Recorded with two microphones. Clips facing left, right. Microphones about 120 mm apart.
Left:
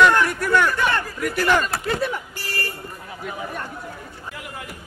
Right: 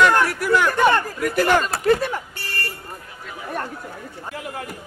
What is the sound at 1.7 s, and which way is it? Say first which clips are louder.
Speech: right 5 dB; 35° right (ahead or behind).